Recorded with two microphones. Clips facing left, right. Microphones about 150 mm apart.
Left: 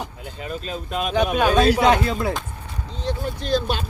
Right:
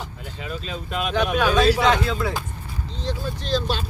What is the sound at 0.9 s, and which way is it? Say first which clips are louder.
Speech: left 1 dB; centre (ahead or behind).